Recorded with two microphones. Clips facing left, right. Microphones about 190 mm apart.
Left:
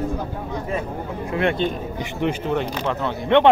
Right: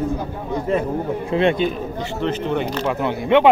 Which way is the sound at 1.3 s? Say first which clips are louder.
Right 4 dB; 20° right (ahead or behind).